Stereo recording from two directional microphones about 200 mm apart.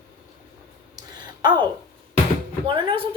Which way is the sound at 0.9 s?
20° right (ahead or behind).